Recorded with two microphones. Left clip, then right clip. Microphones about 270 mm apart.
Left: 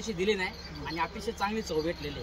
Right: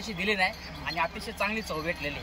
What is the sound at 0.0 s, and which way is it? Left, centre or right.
Speech, centre.